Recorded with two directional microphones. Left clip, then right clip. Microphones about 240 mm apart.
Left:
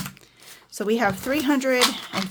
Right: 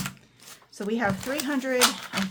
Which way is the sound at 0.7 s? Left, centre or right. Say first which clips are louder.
Left 5 dB; left.